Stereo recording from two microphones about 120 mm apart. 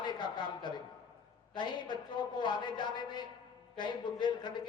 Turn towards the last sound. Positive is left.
turn(degrees=40)  # may be behind; listen again after turning